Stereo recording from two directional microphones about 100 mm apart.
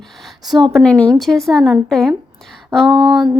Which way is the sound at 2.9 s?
55° right (ahead or behind).